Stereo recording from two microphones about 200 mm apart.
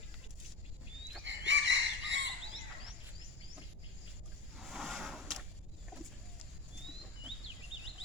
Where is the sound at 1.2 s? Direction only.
65° right (ahead or behind).